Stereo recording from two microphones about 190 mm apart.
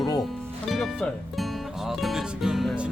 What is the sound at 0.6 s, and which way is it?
Music, centre (ahead or behind).